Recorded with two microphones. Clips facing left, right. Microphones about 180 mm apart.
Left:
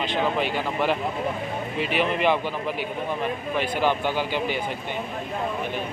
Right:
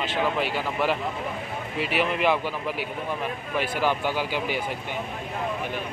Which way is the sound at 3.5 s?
10° right (ahead or behind).